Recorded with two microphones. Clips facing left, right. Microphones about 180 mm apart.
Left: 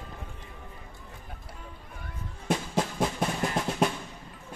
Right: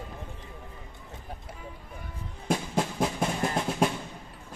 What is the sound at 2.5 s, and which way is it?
Music, centre (ahead or behind).